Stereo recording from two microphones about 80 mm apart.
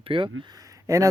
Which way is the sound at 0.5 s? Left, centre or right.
Right.